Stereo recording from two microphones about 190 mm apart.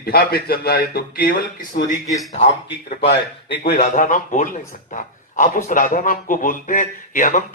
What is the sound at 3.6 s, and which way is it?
A man's voice, 50° left (ahead or behind).